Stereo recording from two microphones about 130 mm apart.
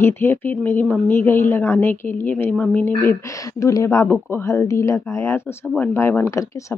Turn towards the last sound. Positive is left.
turn(degrees=20)  # may be behind; listen again after turning